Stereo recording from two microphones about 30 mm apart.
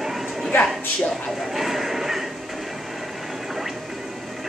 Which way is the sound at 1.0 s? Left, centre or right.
Centre.